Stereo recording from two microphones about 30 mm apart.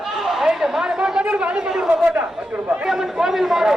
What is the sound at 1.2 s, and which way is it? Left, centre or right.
Speech, right.